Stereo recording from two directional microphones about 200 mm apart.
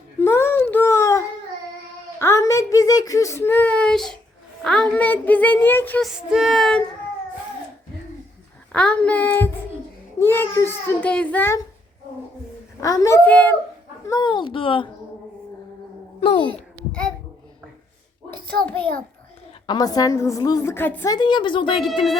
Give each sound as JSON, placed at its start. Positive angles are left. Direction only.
{"t": 0.2, "sound": "a sound", "side_deg": 10}
{"t": 2.1, "sound": "speech", "side_deg": 15}
{"t": 8.7, "sound": "speech", "side_deg": 5}
{"t": 12.8, "sound": "speech", "side_deg": 15}
{"t": 14.1, "sound": "a woman's voice", "side_deg": 20}
{"t": 18.6, "sound": "speech", "side_deg": 5}
{"t": 19.6, "sound": "a woman's voice", "side_deg": 20}